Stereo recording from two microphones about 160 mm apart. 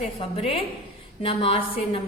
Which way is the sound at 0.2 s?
35° left (ahead or behind).